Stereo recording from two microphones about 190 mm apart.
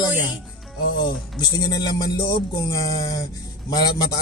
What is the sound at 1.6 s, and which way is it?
Speech, 20° left (ahead or behind).